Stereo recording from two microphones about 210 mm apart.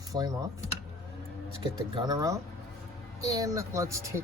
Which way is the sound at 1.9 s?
20° right (ahead or behind).